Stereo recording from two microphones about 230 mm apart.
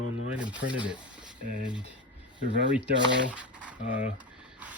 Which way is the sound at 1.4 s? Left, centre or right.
Right.